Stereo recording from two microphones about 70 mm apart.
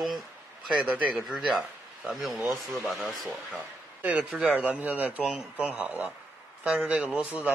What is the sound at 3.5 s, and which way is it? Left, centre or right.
A man's voice, right.